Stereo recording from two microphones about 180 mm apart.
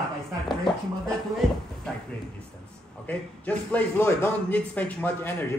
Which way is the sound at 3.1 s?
10° left (ahead or behind).